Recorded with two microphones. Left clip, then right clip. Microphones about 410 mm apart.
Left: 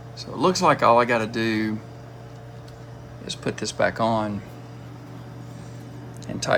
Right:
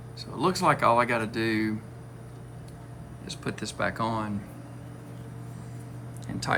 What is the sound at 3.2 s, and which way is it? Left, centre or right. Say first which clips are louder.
Speech: left 7 dB; centre.